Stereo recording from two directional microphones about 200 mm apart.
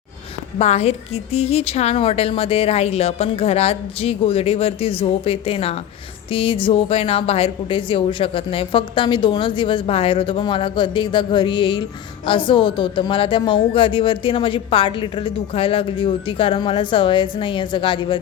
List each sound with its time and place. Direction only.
0.6 s a woman's voice: 30° left (ahead or behind)